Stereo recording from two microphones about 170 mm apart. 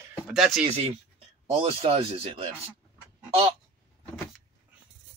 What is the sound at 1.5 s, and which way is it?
Speech, 35° right (ahead or behind).